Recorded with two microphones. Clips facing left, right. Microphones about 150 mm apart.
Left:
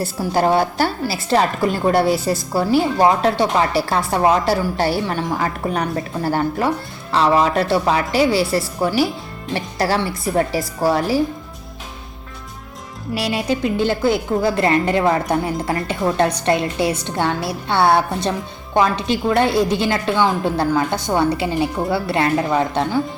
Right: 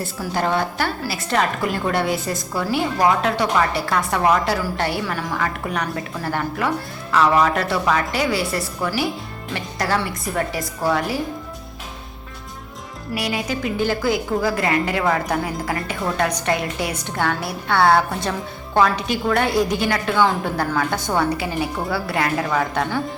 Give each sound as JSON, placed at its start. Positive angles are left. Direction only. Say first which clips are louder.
{"t": 0.0, "sound": "a woman's voice", "louder": "left 5 dB", "side_deg": 35}
{"t": 13.1, "sound": "a woman's voice", "louder": "left 4 dB", "side_deg": 25}